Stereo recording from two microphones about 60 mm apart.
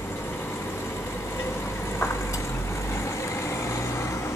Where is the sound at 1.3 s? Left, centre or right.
Left.